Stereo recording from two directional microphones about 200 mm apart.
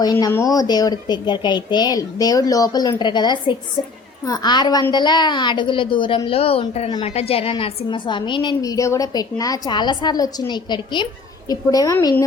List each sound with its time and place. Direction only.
0.0 s a woman's voice: 20° left (ahead or behind)